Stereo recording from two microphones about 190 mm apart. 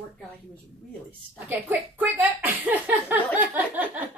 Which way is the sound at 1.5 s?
10° right (ahead or behind).